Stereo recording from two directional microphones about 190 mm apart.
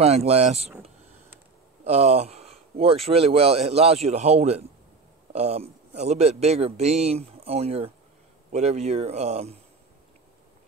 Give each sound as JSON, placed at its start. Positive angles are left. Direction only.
{"t": 0.0, "sound": "speech", "side_deg": -35}
{"t": 1.9, "sound": "speech", "side_deg": -35}